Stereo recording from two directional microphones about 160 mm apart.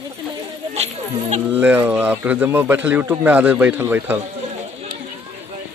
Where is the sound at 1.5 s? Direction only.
10° right (ahead or behind).